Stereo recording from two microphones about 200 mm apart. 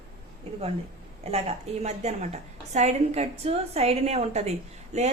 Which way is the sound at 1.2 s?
30° right (ahead or behind).